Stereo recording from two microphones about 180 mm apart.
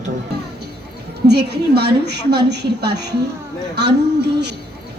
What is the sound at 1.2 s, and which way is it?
A woman's voice, 65° right (ahead or behind).